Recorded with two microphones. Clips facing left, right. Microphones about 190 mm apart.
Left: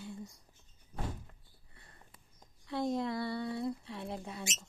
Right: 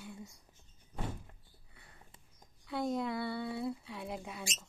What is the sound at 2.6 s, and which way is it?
Speech, centre (ahead or behind).